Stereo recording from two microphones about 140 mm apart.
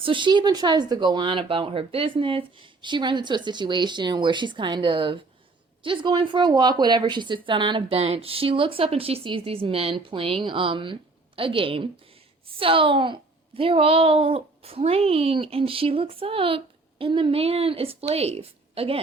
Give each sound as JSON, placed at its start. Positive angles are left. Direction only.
{"t": 0.0, "sound": "speech", "side_deg": -35}